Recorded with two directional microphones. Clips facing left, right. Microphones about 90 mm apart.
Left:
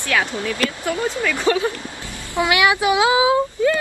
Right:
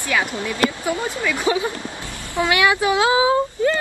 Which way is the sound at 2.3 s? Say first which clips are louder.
Left 1 dB; 20° left (ahead or behind).